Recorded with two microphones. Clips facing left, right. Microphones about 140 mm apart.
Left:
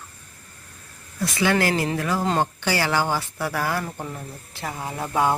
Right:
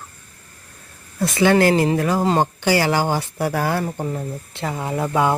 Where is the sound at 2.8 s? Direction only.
40° right (ahead or behind).